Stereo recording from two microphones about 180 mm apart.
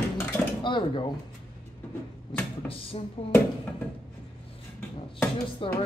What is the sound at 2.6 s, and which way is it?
Speech, 10° left (ahead or behind).